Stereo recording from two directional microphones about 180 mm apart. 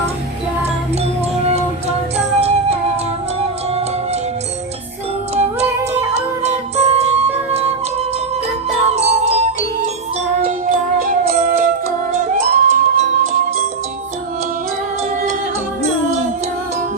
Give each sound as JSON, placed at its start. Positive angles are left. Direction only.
{"t": 2.1, "sound": "music", "side_deg": -35}
{"t": 5.3, "sound": "music", "side_deg": -35}
{"t": 9.0, "sound": "music", "side_deg": -35}
{"t": 10.7, "sound": "music", "side_deg": -55}